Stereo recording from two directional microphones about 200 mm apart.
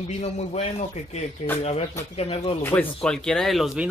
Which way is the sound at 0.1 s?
35° left (ahead or behind).